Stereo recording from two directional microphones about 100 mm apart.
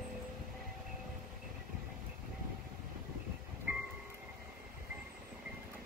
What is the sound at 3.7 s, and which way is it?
Train, 15° right (ahead or behind).